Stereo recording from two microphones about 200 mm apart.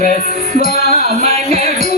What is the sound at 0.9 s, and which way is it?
Music, 35° right (ahead or behind).